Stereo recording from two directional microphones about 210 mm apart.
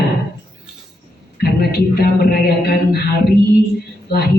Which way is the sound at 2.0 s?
50° left (ahead or behind).